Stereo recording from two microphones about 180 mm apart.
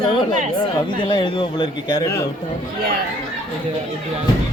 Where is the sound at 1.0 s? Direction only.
25° left (ahead or behind).